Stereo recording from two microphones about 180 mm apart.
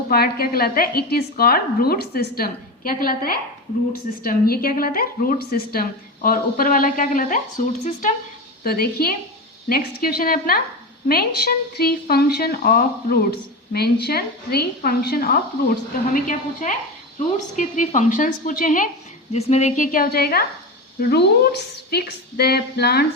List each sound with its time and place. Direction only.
0.1 s a woman's voice: 55° left (ahead or behind)
8.6 s a woman's voice: 55° left (ahead or behind)
16.1 s a woman's voice: 45° left (ahead or behind)
19.3 s a woman's voice: 35° left (ahead or behind); by 23.0 s 60° left (ahead or behind)